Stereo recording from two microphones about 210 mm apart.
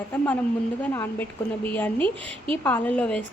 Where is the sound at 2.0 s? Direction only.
25° right (ahead or behind).